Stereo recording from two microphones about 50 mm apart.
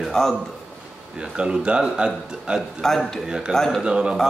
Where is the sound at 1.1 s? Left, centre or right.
Centre.